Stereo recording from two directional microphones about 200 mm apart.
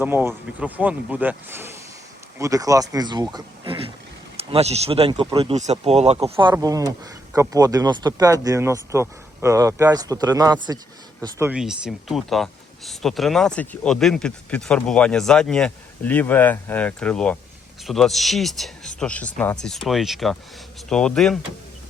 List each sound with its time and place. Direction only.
0.0 s speech: 10° right (ahead or behind)